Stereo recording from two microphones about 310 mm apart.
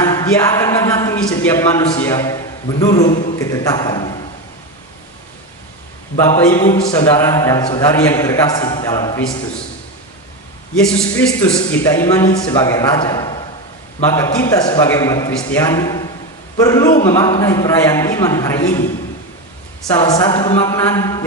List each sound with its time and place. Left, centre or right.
0.0 s a man's voice: centre
3.1 s a man's voice: left
3.3 s a man's voice: centre
6.1 s a man's voice: centre
10.9 s a man's voice: centre
20.0 s a man's voice: centre